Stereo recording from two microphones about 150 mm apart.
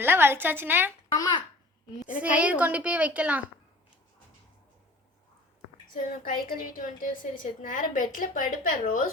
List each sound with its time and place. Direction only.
0.0 s a woman's voice: 15° right (ahead or behind)
2.0 s a woman's voice: 10° right (ahead or behind)
5.9 s a woman's voice: 65° left (ahead or behind)